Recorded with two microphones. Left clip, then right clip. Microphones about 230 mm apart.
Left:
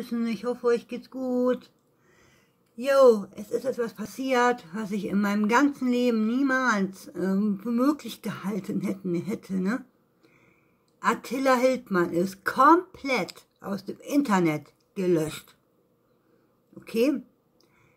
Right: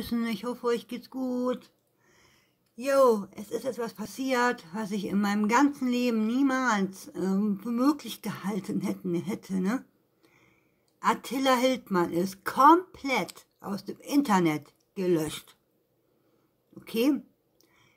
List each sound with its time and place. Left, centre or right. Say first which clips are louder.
0.0 s speech: left 2 dB; right
3.3 s speech: left 4 dB; centre
11.1 s speech: left 2 dB; centre
16.8 s speech: left 2 dB; centre